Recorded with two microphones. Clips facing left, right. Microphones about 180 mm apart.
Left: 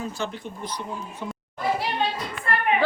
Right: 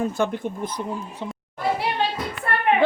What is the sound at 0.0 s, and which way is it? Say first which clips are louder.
Speech: right 7 dB; 55° right (ahead or behind).